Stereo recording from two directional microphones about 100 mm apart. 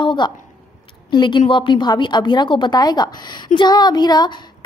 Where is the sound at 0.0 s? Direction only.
50° left (ahead or behind).